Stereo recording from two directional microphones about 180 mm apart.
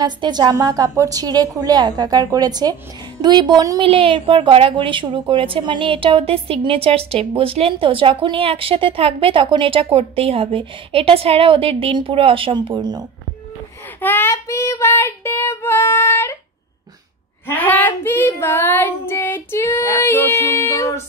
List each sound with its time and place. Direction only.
0.0 s a woman's voice: 25° right (ahead or behind)
14.0 s child singing: 10° left (ahead or behind)
17.5 s child singing: 10° left (ahead or behind)